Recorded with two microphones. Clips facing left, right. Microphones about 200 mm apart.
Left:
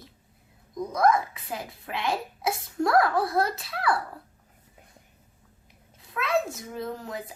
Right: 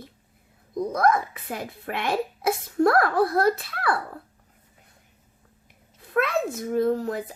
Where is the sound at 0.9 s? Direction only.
55° right (ahead or behind).